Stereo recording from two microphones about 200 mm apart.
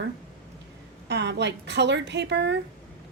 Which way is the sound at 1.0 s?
60° right (ahead or behind).